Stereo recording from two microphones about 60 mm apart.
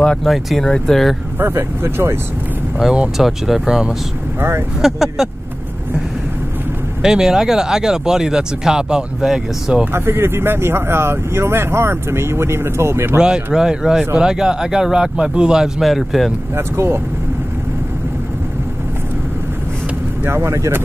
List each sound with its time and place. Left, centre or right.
0.0 s a sound: centre
0.3 s speech: centre
0.7 s speech: centre
1.4 s speech: right
3.2 s speech: centre
4.4 s speech: right
4.8 s speech: centre
7.0 s speech: centre
9.9 s speech: right
13.2 s speech: centre
16.5 s speech: right
20.2 s speech: right